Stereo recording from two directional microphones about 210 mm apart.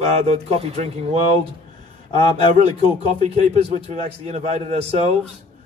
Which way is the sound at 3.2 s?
30° right (ahead or behind).